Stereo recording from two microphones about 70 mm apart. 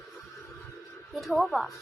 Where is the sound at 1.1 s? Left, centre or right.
Centre.